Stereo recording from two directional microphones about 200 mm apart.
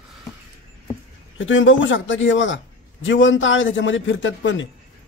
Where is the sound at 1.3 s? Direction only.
70° left (ahead or behind).